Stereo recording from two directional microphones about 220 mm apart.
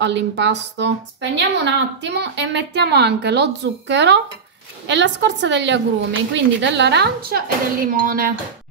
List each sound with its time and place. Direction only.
0.0 s speech: 55° right (ahead or behind)